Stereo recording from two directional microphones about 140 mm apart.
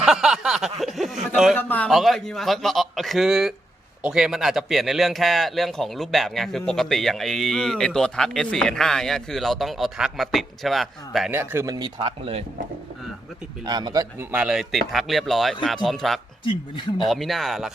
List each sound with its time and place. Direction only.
0.0 s speech: 5° right (ahead or behind)
1.5 s speech: 10° left (ahead or behind)
1.9 s a man's voice: centre (ahead or behind)
11.3 s speech: 15° right (ahead or behind); by 12.5 s 45° right (ahead or behind)
13.7 s a man's voice: 30° right (ahead or behind)
14.2 s speech: 15° right (ahead or behind)
14.4 s a man's voice: 5° right (ahead or behind)
16.4 s speech: 35° left (ahead or behind)
17.1 s a man's voice: centre (ahead or behind)